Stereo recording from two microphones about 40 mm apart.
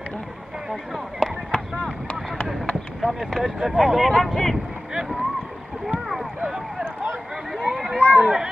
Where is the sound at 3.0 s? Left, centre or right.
Centre.